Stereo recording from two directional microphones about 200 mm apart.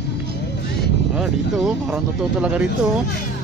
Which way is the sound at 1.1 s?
Centre (ahead or behind).